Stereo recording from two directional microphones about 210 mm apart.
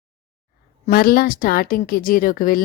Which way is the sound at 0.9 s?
45° left (ahead or behind).